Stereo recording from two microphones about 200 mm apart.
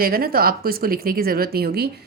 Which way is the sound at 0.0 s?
45° right (ahead or behind).